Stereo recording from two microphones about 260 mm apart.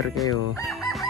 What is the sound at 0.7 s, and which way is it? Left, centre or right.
Chicken, centre.